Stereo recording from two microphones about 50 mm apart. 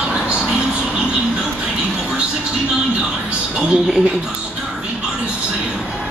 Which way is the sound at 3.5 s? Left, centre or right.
Centre.